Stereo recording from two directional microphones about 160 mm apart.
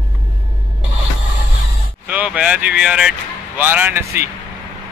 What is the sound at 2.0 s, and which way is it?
Speech, 10° right (ahead or behind).